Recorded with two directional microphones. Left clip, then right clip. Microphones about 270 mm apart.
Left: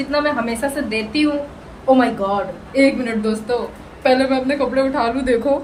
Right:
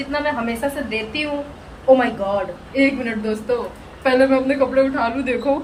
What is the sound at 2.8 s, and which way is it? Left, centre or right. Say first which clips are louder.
A woman's voice: left 3 dB; centre.